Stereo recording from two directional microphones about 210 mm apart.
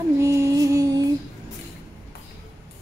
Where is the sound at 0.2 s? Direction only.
15° right (ahead or behind).